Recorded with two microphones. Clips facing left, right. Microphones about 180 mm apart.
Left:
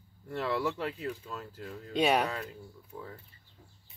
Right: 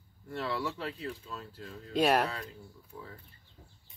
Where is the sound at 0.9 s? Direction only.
30° right (ahead or behind).